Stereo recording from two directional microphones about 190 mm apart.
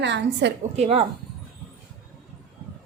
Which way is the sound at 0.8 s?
30° right (ahead or behind).